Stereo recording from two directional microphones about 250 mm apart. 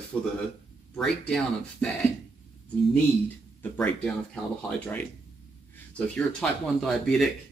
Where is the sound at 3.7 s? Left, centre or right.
Centre.